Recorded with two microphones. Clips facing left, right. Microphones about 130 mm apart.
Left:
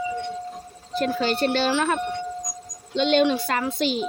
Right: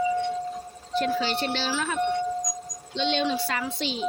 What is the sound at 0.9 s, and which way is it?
A woman's voice, 45° left (ahead or behind).